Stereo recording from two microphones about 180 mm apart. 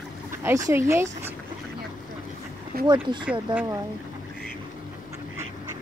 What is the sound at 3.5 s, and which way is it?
Speech, 10° right (ahead or behind).